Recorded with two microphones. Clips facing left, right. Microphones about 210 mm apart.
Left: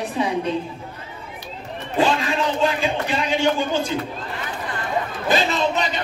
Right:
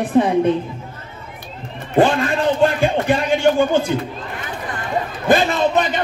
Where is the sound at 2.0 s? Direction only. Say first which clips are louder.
Right 5 dB; 55° right (ahead or behind).